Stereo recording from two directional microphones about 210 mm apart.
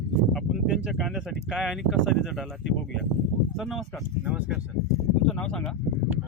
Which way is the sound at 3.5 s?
Centre (ahead or behind).